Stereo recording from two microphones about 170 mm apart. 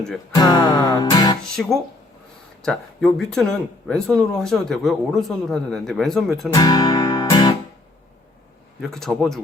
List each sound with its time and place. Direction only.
0.3 s music: 25° left (ahead or behind)
1.6 s speech: 5° left (ahead or behind)
6.5 s music: 20° left (ahead or behind)
8.8 s speech: centre (ahead or behind)